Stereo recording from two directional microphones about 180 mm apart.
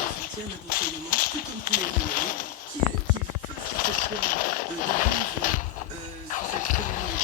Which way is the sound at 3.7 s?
50° left (ahead or behind).